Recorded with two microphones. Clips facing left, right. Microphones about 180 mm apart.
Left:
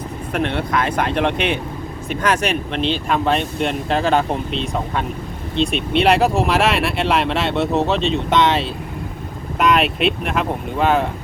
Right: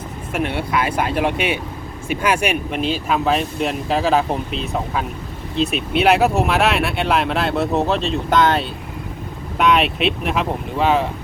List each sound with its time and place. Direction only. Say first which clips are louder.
0.3 s speech: left 1 dB; 5° right (ahead or behind)